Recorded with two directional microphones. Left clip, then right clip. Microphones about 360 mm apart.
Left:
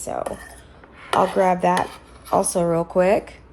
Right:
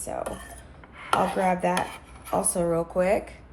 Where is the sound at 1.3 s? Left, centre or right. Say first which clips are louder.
Left 6 dB; left.